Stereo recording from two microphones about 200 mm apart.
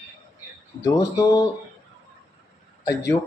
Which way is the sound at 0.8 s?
15° left (ahead or behind).